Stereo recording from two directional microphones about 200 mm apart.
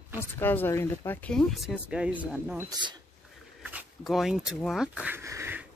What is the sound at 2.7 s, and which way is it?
Speech, 20° right (ahead or behind).